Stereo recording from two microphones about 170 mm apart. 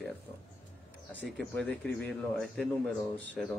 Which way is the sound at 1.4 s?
5° left (ahead or behind).